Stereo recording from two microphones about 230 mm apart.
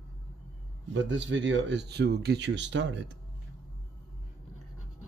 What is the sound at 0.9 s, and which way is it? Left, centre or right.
Speech, right.